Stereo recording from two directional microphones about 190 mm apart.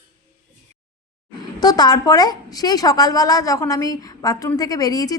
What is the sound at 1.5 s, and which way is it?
A woman's voice, 20° left (ahead or behind).